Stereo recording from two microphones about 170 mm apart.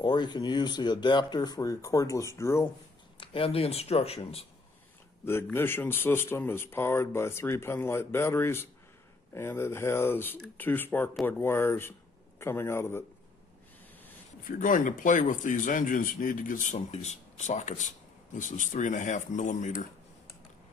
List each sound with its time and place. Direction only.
0.0 s speech: 25° left (ahead or behind)
3.2 s speech: 30° left (ahead or behind)
5.2 s speech: 15° left (ahead or behind)
14.4 s speech: 50° left (ahead or behind)